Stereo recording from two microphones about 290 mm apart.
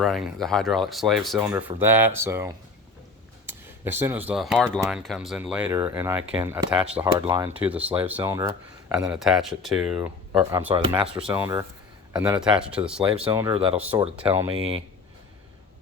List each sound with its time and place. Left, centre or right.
0.0 s speech: centre
13.2 s speech: centre
14.5 s speech: centre